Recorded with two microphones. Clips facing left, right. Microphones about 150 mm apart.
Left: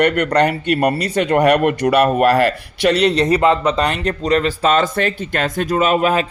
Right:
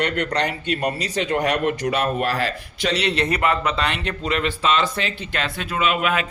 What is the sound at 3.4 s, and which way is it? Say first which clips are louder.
Speech: left 7 dB; 25° left (ahead or behind).